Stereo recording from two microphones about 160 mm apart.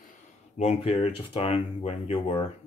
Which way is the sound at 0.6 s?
40° left (ahead or behind).